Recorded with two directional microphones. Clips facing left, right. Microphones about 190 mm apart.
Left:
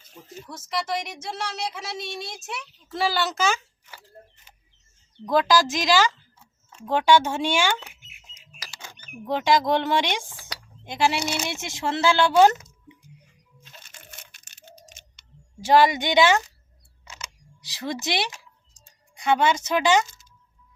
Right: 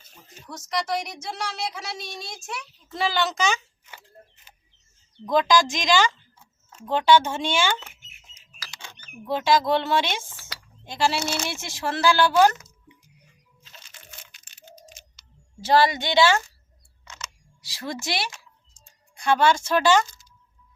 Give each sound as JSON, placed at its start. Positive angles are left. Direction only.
{"t": 0.4, "sound": "a woman's voice", "side_deg": 5}
{"t": 5.2, "sound": "speech", "side_deg": 5}
{"t": 9.2, "sound": "speech", "side_deg": 15}
{"t": 15.6, "sound": "speech", "side_deg": 15}
{"t": 17.1, "sound": "camera", "side_deg": 15}
{"t": 19.1, "sound": "speech", "side_deg": 20}